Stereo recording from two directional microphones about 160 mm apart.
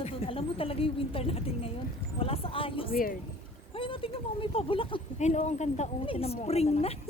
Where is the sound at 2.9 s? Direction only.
60° left (ahead or behind).